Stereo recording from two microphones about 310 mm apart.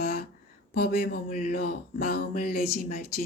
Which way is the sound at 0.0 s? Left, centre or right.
Left.